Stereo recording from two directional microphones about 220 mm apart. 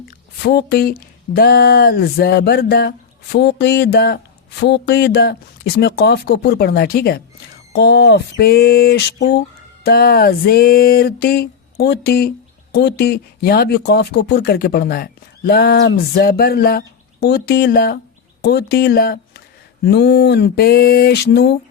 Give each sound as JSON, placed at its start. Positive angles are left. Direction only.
{"t": 0.4, "sound": "speech", "side_deg": 45}